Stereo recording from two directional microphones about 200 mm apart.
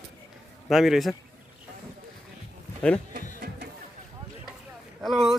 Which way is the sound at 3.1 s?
50° right (ahead or behind).